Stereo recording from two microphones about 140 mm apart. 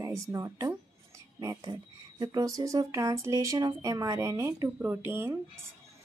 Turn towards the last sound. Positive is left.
turn(degrees=-15)  # may be behind; listen again after turning